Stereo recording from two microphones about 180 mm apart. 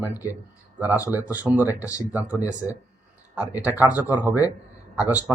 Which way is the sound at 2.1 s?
10° right (ahead or behind).